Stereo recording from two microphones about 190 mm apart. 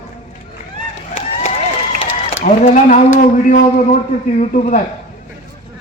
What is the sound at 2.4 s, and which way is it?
Speech, 45° left (ahead or behind).